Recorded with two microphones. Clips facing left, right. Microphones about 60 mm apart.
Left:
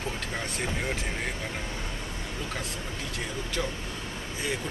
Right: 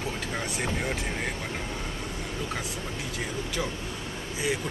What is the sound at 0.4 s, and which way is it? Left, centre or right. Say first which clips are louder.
Speech: right 2 dB; centre.